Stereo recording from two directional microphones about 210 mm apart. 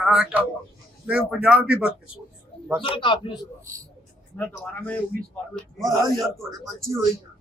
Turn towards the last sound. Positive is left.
turn(degrees=-15)  # may be behind; listen again after turning